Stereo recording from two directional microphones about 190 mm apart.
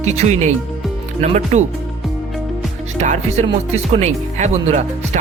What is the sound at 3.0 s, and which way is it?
Speech, 35° right (ahead or behind).